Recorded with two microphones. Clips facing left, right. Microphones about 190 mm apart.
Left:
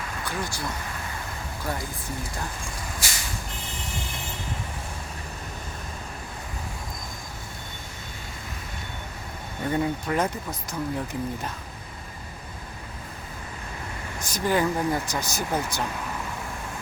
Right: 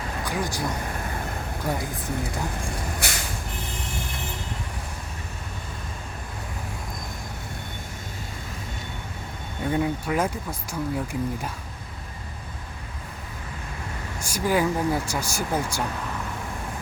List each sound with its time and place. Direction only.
0.3 s speech: 15° right (ahead or behind)
3.0 s vehicle: 60° right (ahead or behind)
9.6 s speech: 5° right (ahead or behind)
14.2 s speech: 10° right (ahead or behind)